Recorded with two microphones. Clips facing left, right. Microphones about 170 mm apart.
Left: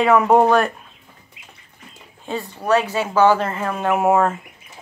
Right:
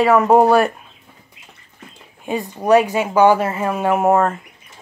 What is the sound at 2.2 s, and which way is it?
Speech, 15° right (ahead or behind).